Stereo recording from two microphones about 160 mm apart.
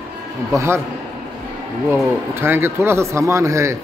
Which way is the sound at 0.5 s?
20° right (ahead or behind).